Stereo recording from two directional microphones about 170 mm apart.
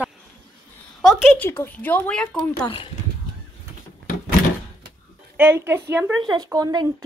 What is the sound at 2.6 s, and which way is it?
Speech, 30° left (ahead or behind).